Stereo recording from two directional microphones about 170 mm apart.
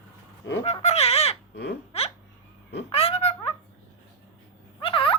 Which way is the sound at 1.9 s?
40° left (ahead or behind).